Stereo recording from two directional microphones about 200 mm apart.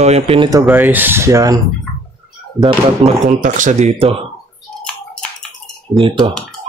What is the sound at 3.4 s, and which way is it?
Speech, 40° right (ahead or behind).